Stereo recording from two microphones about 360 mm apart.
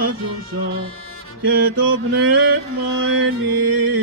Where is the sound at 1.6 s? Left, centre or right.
Right.